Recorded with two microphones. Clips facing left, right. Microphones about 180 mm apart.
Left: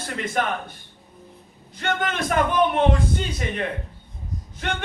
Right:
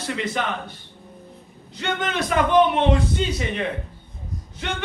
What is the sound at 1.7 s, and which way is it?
A man's voice, 50° left (ahead or behind).